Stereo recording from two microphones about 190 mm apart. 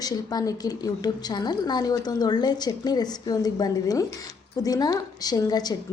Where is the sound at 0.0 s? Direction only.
20° left (ahead or behind).